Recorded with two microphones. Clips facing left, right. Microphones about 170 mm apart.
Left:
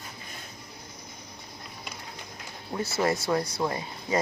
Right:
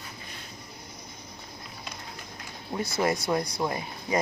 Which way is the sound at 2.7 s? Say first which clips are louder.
Even; 15° right (ahead or behind).